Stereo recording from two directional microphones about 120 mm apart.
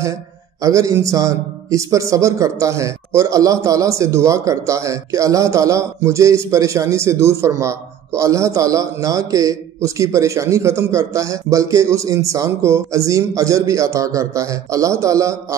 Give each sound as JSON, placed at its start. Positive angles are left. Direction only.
{"t": 0.6, "sound": "speech", "side_deg": -30}